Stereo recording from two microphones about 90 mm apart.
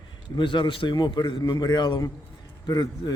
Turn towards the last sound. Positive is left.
turn(degrees=45)  # may be behind; listen again after turning